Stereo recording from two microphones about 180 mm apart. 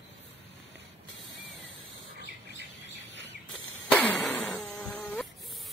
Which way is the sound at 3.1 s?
80° left.